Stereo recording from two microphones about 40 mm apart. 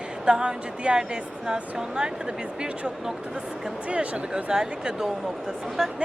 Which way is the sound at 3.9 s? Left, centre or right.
Right.